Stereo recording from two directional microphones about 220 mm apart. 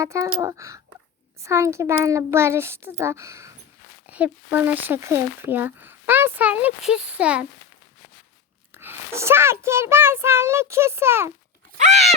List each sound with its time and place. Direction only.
0.0 s speech: 15° right (ahead or behind)
8.7 s speech: 10° right (ahead or behind)
11.8 s crunch: 30° right (ahead or behind)